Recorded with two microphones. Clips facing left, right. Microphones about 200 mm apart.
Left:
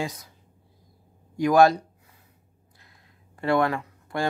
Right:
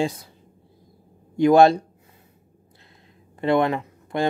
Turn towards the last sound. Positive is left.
turn(degrees=-20)  # may be behind; listen again after turning